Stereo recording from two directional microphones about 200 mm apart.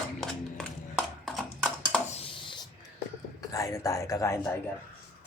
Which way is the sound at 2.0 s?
30° left (ahead or behind).